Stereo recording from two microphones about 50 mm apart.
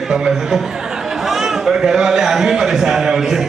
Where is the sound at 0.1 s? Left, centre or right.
Centre.